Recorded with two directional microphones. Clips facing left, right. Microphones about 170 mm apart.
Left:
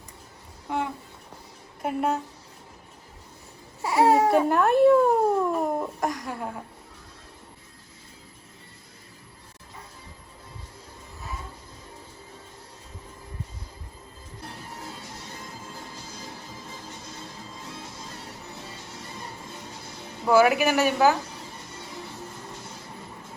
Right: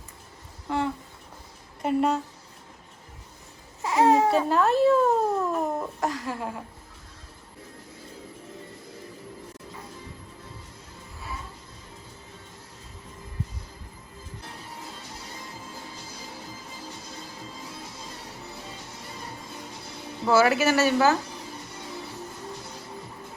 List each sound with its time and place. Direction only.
0.7 s a sound: 10° left (ahead or behind)
1.8 s a woman's voice: 5° left (ahead or behind)
3.8 s babbling: centre (ahead or behind)
4.3 s a sound: 15° left (ahead or behind)
6.0 s speech: 5° right (ahead or behind)
20.2 s speech: 15° left (ahead or behind)